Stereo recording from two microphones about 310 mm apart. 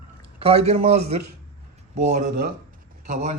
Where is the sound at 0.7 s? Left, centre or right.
Right.